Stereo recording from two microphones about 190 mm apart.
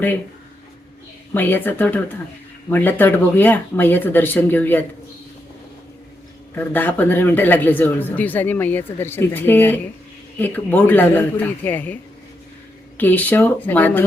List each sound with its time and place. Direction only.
1.3 s speech: 10° left (ahead or behind)
6.6 s speech: 10° left (ahead or behind)
13.0 s speech: 10° left (ahead or behind)